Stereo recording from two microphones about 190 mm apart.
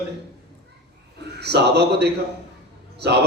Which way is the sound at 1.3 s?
60° right (ahead or behind).